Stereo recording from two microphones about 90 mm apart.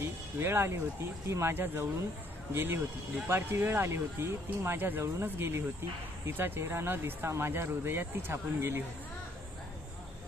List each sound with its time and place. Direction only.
0.0 s speech: 25° right (ahead or behind)